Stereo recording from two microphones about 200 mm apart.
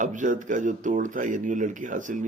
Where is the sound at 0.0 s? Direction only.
40° right (ahead or behind).